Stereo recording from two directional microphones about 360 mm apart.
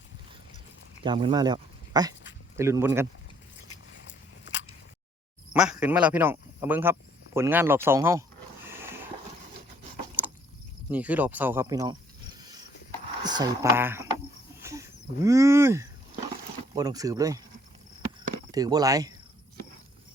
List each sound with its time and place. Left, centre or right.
1.0 s speech: centre
4.0 s biting: left
5.5 s speech: centre
10.2 s vehicle: centre
10.9 s speech: centre
12.4 s a sound: centre
13.2 s speech: centre
14.6 s a sound: centre
16.7 s speech: centre
18.5 s speech: centre